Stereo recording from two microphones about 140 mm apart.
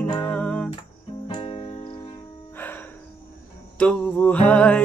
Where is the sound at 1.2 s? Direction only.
40° left (ahead or behind).